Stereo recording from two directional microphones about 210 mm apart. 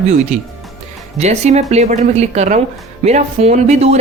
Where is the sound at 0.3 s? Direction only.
30° right (ahead or behind).